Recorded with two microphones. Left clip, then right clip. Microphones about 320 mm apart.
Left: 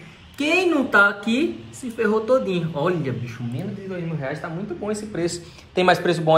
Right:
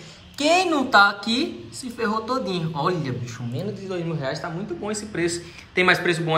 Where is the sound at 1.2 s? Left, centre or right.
Right.